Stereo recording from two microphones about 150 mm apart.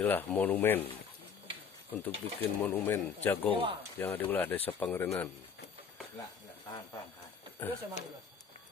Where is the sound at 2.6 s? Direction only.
5° left (ahead or behind).